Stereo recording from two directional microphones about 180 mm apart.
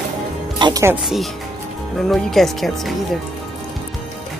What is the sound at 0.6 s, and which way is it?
Speech, 25° right (ahead or behind).